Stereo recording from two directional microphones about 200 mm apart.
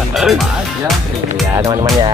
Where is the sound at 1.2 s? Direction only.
15° right (ahead or behind).